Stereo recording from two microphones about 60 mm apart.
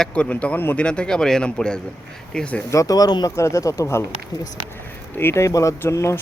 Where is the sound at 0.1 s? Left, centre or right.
Left.